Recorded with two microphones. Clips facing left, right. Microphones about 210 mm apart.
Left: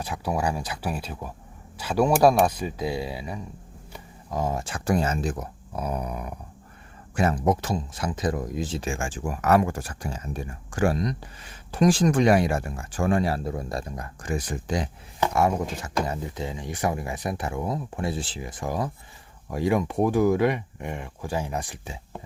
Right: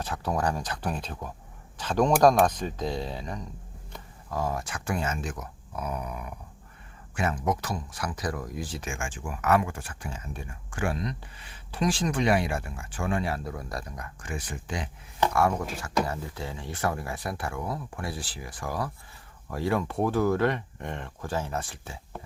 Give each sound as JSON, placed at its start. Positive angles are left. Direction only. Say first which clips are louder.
{"t": 0.0, "sound": "speech", "louder": "left 1 dB", "side_deg": 10}
{"t": 3.9, "sound": "speech", "louder": "left 2 dB", "side_deg": 20}
{"t": 15.3, "sound": "speech", "louder": "left 4 dB", "side_deg": 20}